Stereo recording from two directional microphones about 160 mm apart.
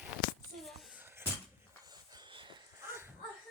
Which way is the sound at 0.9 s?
15° right (ahead or behind).